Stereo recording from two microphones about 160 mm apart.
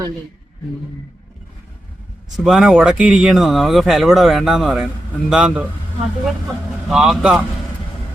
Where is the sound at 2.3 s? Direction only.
5° right (ahead or behind).